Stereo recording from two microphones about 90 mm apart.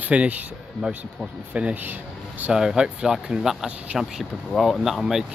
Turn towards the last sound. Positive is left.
turn(degrees=-5)  # may be behind; listen again after turning